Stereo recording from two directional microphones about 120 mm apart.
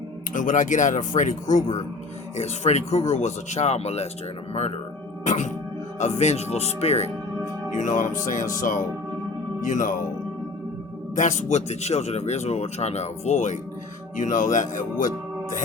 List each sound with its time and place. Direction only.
0.3 s speech: 90° left
2.3 s speech: 70° left (ahead or behind)
5.2 s music: 90° left
6.0 s speech: 70° left (ahead or behind)
7.8 s speech: 90° left
11.1 s speech: 90° left